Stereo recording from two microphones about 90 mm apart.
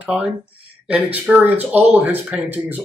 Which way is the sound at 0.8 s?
15° right (ahead or behind).